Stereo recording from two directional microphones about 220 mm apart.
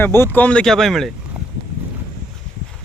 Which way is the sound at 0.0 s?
10° left (ahead or behind).